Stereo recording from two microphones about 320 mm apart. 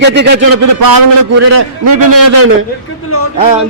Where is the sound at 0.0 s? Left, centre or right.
Right.